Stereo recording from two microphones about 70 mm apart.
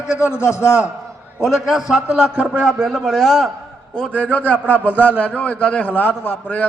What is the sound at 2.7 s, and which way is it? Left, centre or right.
Speech, centre.